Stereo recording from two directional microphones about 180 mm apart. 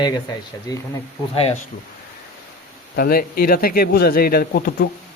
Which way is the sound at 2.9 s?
55° left (ahead or behind).